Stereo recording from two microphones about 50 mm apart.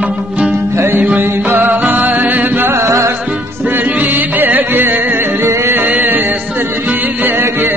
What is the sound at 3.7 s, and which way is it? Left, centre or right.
Music, right.